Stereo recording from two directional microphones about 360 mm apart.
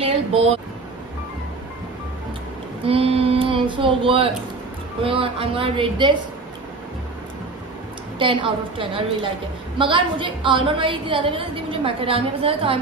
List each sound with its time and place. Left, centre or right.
0.0 s a sound: centre
2.8 s a woman's voice: centre
8.2 s a woman's voice: centre